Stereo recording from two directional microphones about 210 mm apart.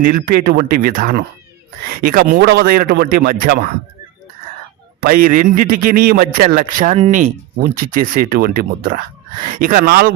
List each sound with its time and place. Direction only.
0.1 s speech: 45° right (ahead or behind)
5.0 s a man's voice: 40° right (ahead or behind)